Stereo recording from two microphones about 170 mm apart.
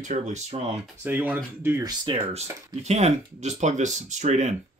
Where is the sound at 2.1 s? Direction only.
30° right (ahead or behind).